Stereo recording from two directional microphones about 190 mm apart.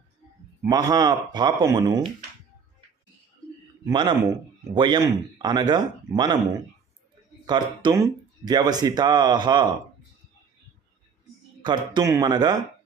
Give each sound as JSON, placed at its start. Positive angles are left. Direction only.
{"t": 0.6, "sound": "speech", "side_deg": -20}
{"t": 3.8, "sound": "speech", "side_deg": -25}
{"t": 7.4, "sound": "speech", "side_deg": -25}
{"t": 11.6, "sound": "speech", "side_deg": -20}